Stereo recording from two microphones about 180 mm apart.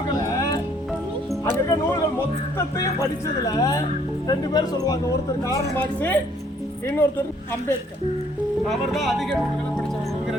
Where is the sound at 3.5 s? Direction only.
20° left (ahead or behind).